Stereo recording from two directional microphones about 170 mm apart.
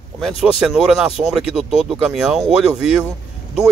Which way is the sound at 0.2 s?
Centre (ahead or behind).